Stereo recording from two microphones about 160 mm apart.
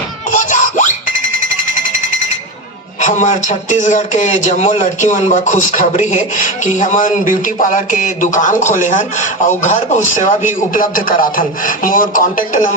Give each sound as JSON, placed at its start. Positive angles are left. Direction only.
{"t": 0.3, "sound": "a sound", "side_deg": 50}
{"t": 1.4, "sound": "jackhammer", "side_deg": 55}
{"t": 3.0, "sound": "speech", "side_deg": 50}